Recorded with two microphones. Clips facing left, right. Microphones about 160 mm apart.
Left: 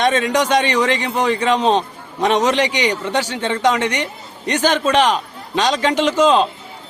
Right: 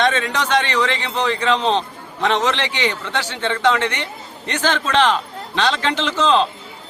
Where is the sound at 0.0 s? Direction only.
15° left (ahead or behind).